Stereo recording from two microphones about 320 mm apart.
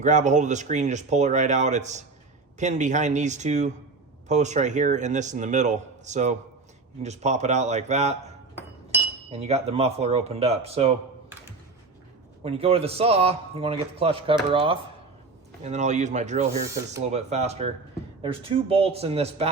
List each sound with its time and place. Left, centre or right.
0.0 s speech: right
9.3 s speech: centre
12.4 s a man's voice: centre
16.6 s a man's voice: centre
17.0 s a man's voice: right